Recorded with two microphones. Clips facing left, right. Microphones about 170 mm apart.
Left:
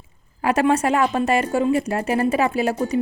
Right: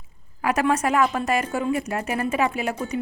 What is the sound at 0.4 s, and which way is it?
A woman's voice, 30° left (ahead or behind).